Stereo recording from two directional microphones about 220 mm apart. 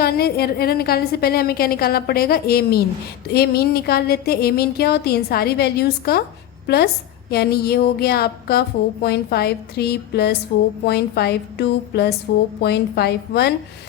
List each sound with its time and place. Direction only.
0.0 s a woman's voice: 45° left (ahead or behind)